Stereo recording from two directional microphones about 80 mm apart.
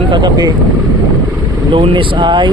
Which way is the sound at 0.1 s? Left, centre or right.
Right.